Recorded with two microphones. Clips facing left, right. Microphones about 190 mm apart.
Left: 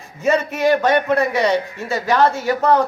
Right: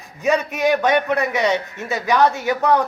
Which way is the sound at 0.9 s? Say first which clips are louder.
Left 2 dB; 20° right (ahead or behind).